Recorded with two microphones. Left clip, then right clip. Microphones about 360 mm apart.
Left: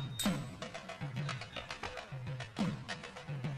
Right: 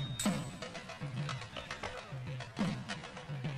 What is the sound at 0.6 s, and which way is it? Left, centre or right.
Music, left.